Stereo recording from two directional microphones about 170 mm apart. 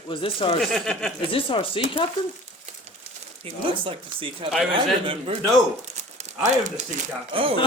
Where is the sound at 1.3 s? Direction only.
30° left (ahead or behind).